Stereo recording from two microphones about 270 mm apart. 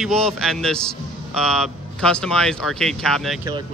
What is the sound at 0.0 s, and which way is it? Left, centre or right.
Speech, centre.